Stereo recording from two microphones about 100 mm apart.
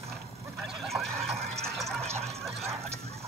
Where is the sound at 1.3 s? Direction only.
90° right.